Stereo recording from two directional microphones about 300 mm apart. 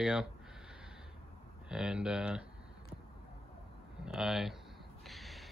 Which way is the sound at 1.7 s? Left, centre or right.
Centre.